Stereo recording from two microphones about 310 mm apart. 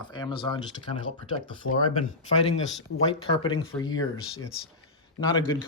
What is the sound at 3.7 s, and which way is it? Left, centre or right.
Speech, centre.